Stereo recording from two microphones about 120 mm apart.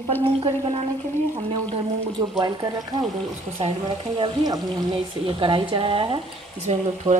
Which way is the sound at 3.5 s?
45° right (ahead or behind).